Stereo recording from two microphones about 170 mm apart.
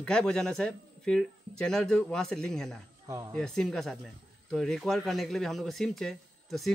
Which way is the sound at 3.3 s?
5° left (ahead or behind).